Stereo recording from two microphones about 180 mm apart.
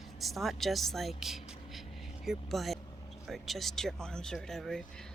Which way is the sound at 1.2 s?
Centre (ahead or behind).